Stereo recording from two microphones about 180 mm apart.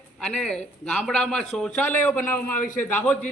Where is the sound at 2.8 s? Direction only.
10° left (ahead or behind).